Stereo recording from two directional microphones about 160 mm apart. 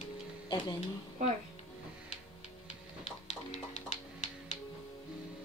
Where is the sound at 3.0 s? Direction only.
40° left (ahead or behind).